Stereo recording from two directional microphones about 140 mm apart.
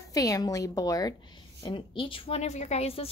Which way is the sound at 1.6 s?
40° left (ahead or behind).